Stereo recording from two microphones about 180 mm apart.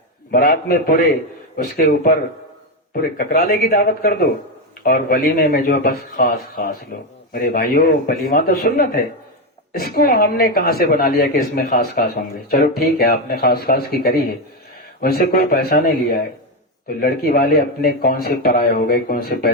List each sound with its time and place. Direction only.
0.3 s a man's voice: 55° left (ahead or behind)